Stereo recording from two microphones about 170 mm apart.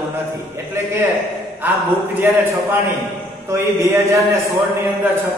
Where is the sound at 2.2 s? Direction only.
10° right (ahead or behind).